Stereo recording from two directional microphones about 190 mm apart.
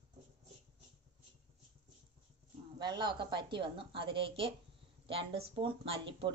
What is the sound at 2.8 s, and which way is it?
Speech, 25° right (ahead or behind).